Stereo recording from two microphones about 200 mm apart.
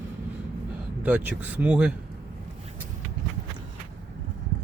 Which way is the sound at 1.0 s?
10° right (ahead or behind).